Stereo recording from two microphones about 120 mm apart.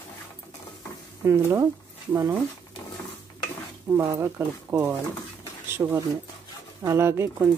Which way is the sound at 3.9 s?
25° right (ahead or behind).